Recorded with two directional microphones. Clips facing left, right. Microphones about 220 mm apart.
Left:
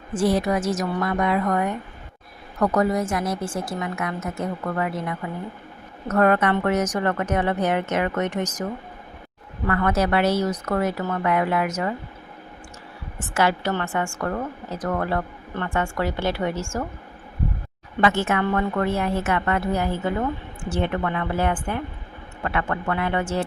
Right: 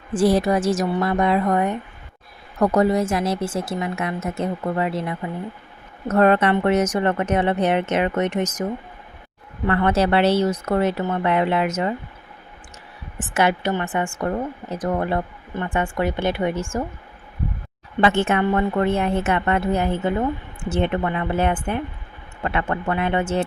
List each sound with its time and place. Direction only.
0.1 s a woman's voice: 35° right (ahead or behind)
9.6 s a woman's voice: 25° right (ahead or behind)
13.1 s a woman's voice: 20° right (ahead or behind)
18.0 s a woman's voice: 25° right (ahead or behind)